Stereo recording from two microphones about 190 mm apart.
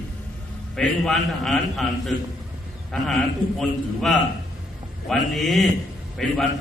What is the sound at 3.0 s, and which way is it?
A man's voice, centre (ahead or behind).